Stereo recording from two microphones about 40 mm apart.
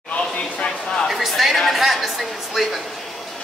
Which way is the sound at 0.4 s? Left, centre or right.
Left.